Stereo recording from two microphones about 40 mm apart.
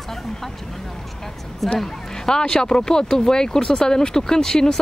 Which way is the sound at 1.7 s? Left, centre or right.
Centre.